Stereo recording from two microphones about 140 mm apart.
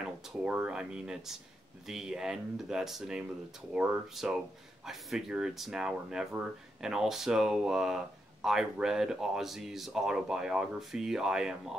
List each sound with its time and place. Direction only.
0.0 s speech: 5° right (ahead or behind)